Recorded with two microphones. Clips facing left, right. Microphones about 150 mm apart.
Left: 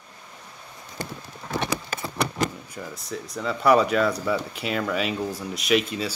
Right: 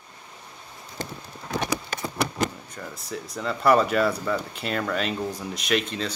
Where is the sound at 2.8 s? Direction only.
10° left (ahead or behind).